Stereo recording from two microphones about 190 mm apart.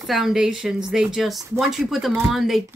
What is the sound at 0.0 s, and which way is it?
Speech, centre (ahead or behind).